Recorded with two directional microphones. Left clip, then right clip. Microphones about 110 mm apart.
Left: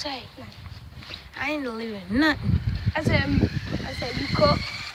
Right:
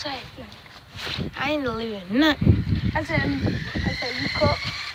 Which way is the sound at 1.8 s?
15° left (ahead or behind).